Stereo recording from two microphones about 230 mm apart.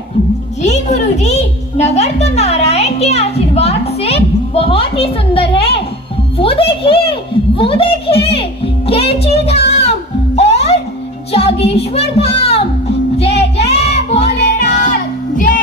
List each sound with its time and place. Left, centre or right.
0.6 s music: left
6.3 s a sound: left
9.8 s music: left
11.3 s speech: left
13.2 s music: left
14.4 s music: left
14.8 s music: left